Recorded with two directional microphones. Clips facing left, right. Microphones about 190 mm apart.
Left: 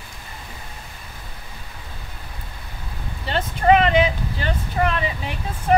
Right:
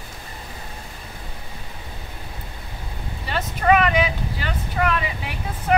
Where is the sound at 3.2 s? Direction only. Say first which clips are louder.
Left 2 dB; 30° left (ahead or behind).